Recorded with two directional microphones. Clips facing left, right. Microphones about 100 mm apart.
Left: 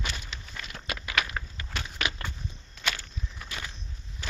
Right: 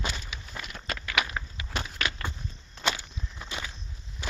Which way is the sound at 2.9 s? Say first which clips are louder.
Even; 20° right (ahead or behind).